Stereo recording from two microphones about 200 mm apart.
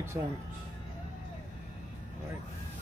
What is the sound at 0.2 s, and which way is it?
Speech, 20° right (ahead or behind).